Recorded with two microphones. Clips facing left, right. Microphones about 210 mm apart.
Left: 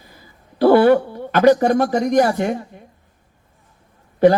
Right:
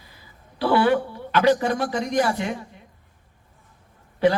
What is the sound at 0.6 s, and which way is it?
Speech, 45° left (ahead or behind).